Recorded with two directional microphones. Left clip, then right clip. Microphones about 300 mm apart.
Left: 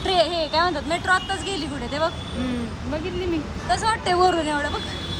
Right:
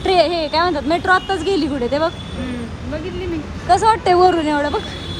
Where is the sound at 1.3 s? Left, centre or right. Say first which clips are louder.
Right 8 dB; centre.